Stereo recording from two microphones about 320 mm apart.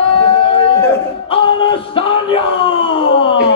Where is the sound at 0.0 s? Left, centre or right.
Centre.